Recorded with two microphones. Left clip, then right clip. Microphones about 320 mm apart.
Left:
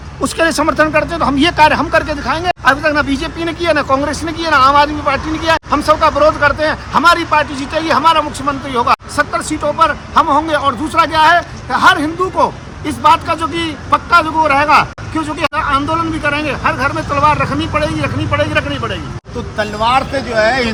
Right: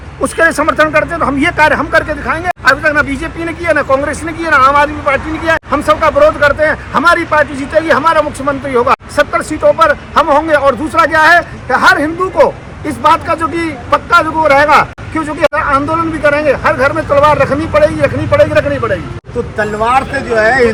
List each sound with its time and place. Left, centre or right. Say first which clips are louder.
0.3 s speech: right 3 dB; centre